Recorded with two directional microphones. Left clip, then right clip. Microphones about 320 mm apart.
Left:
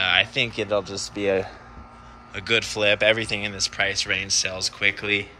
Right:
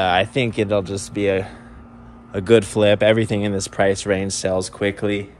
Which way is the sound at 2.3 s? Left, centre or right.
Centre.